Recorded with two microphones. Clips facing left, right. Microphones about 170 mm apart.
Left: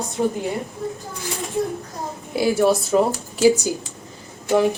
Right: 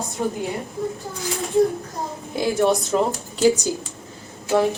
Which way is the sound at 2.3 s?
5° left (ahead or behind).